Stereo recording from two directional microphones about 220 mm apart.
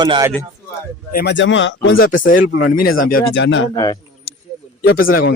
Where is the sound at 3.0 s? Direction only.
40° left (ahead or behind); by 3.7 s 55° left (ahead or behind).